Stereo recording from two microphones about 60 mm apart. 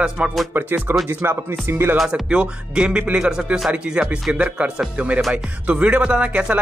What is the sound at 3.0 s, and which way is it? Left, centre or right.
Speech, centre.